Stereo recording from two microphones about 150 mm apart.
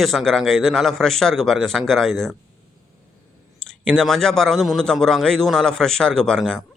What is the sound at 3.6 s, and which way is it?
Speech, 5° left (ahead or behind).